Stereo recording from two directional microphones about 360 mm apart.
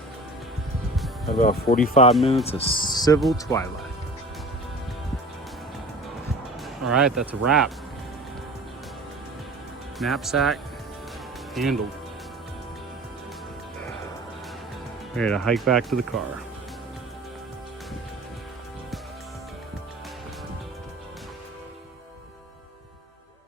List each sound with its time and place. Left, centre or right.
1.4 s speech: left; by 3.7 s centre
6.9 s speech: centre
10.0 s speech: centre
15.1 s speech: centre